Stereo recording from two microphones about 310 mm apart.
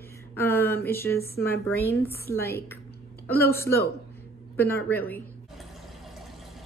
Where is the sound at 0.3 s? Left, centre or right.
Centre.